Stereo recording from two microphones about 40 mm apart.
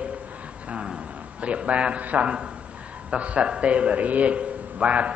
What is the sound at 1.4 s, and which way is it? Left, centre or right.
A man's voice, right.